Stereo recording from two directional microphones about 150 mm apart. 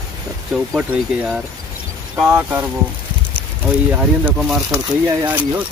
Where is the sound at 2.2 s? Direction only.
10° right (ahead or behind).